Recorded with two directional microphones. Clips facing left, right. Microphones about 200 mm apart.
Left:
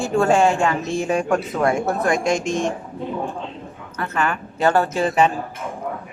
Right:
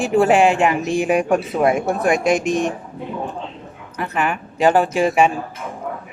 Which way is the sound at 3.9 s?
15° right (ahead or behind).